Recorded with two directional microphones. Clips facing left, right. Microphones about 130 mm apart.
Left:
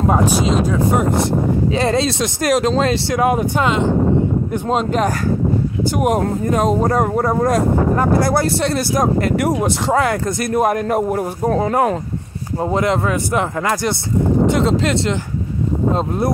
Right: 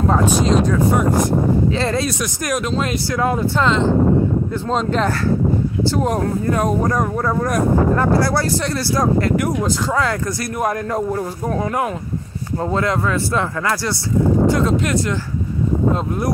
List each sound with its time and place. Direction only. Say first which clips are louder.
1.8 s speech: left 3 dB; 25° left (ahead or behind)
3.2 s speech: left 1 dB; 20° left (ahead or behind)
11.4 s speech: left 6 dB; 30° left (ahead or behind)
12.6 s speech: left 2 dB; 20° left (ahead or behind)